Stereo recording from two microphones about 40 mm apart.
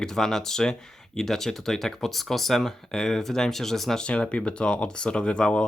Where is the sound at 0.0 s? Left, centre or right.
Centre.